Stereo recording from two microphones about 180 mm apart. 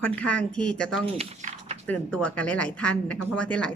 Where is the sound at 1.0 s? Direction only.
35° right (ahead or behind).